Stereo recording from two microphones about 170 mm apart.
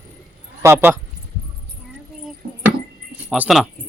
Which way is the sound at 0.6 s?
15° right (ahead or behind).